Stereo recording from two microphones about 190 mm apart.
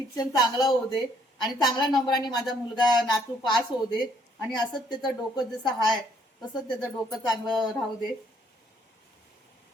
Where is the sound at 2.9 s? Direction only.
Centre (ahead or behind).